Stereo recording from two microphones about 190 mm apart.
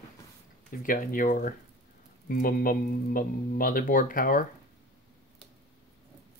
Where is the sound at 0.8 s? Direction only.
45° left (ahead or behind).